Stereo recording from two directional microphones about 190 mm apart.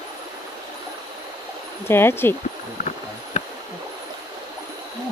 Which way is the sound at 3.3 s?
35° left (ahead or behind).